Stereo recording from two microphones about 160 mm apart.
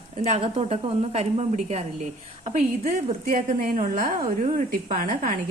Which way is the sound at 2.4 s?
55° right (ahead or behind).